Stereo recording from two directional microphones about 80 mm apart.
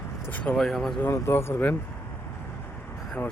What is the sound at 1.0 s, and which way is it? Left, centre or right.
Speech, left.